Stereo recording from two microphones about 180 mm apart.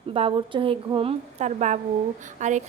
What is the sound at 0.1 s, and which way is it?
A woman's voice, 30° right (ahead or behind).